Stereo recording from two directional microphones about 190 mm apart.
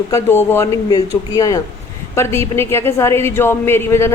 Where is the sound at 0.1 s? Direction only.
10° left (ahead or behind).